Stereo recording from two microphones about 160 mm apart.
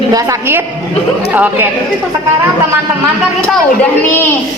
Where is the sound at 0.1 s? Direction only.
15° right (ahead or behind).